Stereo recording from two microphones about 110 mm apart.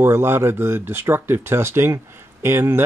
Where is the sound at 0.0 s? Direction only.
20° right (ahead or behind).